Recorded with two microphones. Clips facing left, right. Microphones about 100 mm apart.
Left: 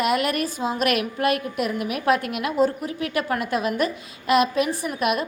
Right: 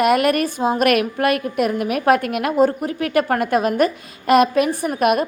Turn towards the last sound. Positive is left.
turn(degrees=-50)  # may be behind; listen again after turning